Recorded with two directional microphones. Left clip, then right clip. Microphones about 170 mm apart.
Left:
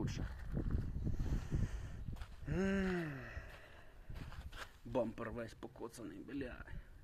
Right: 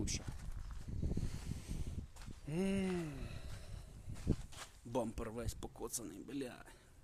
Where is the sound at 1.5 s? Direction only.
25° right (ahead or behind).